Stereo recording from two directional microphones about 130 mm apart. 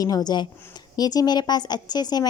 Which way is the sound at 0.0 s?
30° left (ahead or behind).